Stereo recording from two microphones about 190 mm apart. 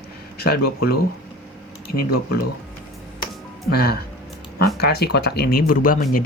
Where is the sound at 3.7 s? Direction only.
55° left (ahead or behind).